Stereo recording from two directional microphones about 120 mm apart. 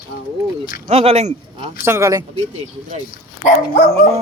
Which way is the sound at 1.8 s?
25° right (ahead or behind).